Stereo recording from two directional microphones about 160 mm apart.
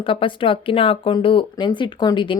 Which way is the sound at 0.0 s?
35° left (ahead or behind).